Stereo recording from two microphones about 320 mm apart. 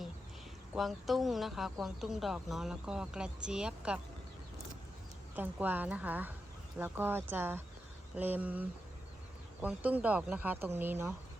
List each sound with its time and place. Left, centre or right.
0.7 s a woman's voice: centre
5.3 s a woman's voice: centre